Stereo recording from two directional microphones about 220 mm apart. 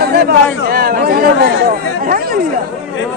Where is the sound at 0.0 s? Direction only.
45° right (ahead or behind).